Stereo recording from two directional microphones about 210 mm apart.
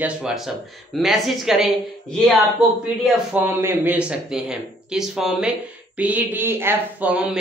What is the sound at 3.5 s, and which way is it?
Speech, 10° right (ahead or behind).